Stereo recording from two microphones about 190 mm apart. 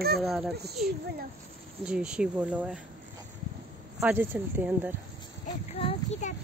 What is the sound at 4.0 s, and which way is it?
Speech, 10° right (ahead or behind).